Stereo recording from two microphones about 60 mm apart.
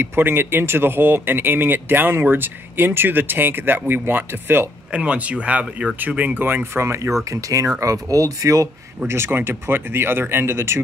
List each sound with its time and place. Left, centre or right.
0.0 s speech: right
4.9 s speech: right
7.2 s speech: right
7.8 s speech: right
9.0 s speech: right